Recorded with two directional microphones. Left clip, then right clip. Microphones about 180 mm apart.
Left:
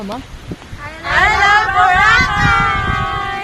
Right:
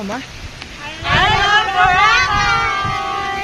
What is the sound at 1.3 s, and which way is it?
Vehicle, 15° left (ahead or behind).